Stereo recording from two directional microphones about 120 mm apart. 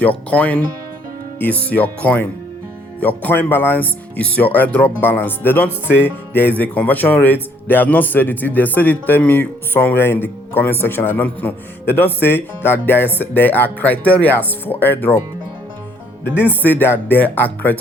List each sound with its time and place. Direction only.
0.0 s a man's voice: 10° left (ahead or behind)
16.5 s a man's voice: 15° left (ahead or behind)